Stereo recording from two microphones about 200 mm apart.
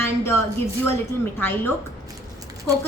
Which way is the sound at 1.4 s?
10° left (ahead or behind).